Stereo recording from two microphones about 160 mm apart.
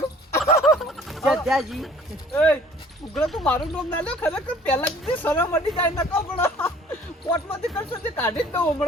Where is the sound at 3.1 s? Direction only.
Centre (ahead or behind).